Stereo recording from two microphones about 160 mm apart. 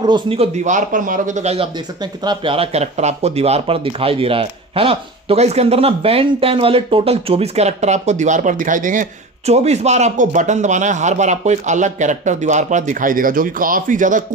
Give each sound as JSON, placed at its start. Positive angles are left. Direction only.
{"t": 0.0, "sound": "a man's voice", "side_deg": -30}
{"t": 9.5, "sound": "a man's voice", "side_deg": -45}